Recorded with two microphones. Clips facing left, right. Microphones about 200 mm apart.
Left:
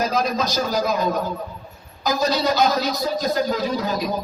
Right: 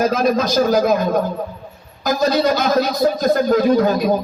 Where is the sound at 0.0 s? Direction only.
55° right (ahead or behind).